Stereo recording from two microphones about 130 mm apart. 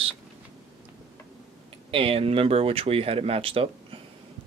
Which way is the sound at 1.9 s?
45° right (ahead or behind).